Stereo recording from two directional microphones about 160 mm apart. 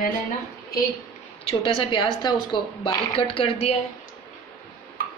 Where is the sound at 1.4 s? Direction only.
30° left (ahead or behind).